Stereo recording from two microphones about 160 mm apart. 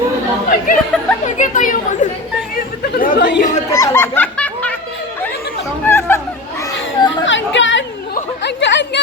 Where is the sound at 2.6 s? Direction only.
70° left (ahead or behind); by 3.4 s 90° left.